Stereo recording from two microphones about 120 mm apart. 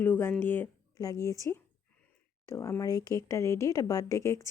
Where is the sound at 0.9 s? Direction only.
30° left (ahead or behind).